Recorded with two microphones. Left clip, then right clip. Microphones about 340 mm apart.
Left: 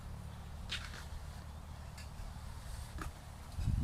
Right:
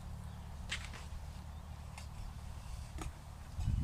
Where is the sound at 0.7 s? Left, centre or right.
Right.